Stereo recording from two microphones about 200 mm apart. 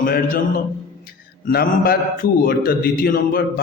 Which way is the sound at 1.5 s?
50° left (ahead or behind).